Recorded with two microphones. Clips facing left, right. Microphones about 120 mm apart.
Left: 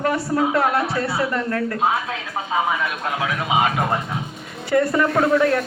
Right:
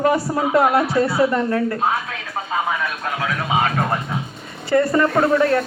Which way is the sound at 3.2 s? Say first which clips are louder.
Even; 15° left (ahead or behind).